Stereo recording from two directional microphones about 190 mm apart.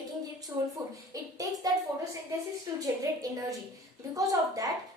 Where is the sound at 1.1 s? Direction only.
20° right (ahead or behind).